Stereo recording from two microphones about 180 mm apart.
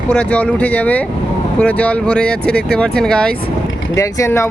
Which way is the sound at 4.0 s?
15° left (ahead or behind).